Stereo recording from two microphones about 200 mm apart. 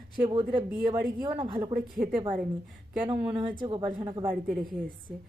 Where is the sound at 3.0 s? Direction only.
25° right (ahead or behind).